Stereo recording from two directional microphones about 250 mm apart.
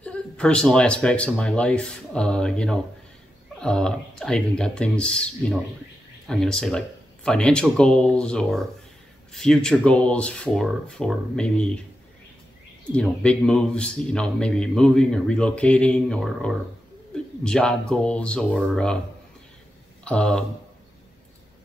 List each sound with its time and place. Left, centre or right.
0.0 s speech: centre
12.9 s speech: centre
20.1 s speech: centre